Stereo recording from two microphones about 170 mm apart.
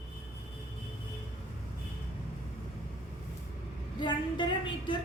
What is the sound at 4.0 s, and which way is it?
Speech, 30° left (ahead or behind).